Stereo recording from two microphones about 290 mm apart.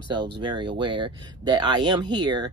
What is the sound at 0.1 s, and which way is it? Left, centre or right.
Speech, centre.